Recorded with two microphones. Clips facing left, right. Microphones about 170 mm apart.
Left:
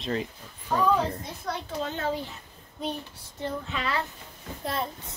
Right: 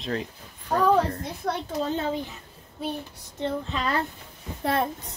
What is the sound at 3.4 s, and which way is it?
Speech, 35° right (ahead or behind).